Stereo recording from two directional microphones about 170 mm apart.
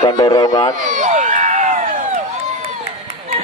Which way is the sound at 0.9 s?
45° right (ahead or behind).